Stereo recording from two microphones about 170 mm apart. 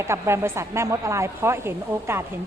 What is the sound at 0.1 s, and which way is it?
A woman's voice, 15° right (ahead or behind).